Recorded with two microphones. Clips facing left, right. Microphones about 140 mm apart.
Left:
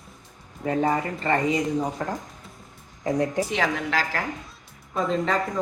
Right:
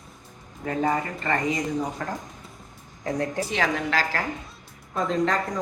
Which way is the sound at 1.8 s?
15° left (ahead or behind).